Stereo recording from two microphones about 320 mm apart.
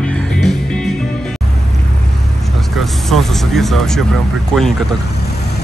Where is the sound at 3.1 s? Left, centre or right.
Centre.